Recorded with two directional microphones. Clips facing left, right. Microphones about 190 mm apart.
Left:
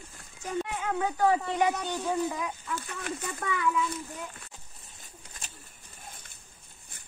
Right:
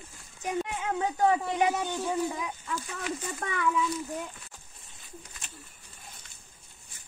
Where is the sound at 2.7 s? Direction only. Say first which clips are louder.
Right 1 dB; 60° left (ahead or behind).